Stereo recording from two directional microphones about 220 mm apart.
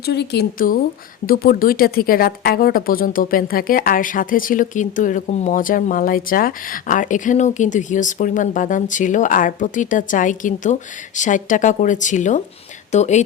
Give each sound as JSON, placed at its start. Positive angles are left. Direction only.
{"t": 0.0, "sound": "a woman's voice", "side_deg": 50}